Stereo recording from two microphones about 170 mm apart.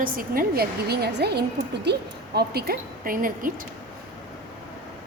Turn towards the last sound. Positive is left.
turn(degrees=-55)  # may be behind; listen again after turning